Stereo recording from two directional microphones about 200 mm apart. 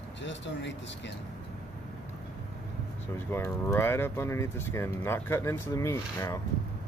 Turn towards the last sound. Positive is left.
turn(degrees=15)  # may be behind; listen again after turning